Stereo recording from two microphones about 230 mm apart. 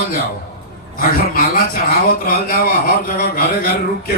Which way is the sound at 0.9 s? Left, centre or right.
Left.